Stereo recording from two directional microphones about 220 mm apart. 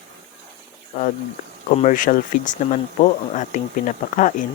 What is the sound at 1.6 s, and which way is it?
Speech, 35° left (ahead or behind).